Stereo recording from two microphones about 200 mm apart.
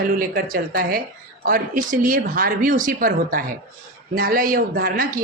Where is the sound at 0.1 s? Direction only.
45° right (ahead or behind).